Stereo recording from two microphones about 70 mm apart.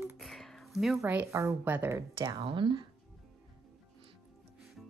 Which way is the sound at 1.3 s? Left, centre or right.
Right.